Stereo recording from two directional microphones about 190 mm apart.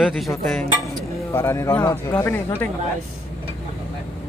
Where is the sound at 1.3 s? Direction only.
15° left (ahead or behind).